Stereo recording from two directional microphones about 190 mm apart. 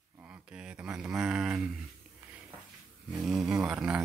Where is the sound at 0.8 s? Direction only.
5° right (ahead or behind).